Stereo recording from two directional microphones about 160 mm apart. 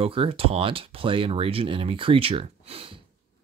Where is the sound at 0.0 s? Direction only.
35° right (ahead or behind).